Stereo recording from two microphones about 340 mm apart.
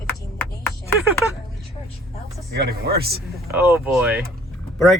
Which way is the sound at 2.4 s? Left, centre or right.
Right.